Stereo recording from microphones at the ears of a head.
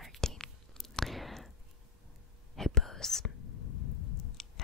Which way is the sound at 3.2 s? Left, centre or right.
Left.